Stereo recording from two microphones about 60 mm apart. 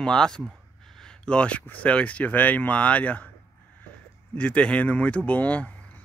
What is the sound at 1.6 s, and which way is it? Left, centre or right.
Speech, left.